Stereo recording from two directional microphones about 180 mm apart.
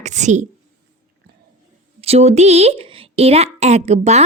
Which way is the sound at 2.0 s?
35° right (ahead or behind).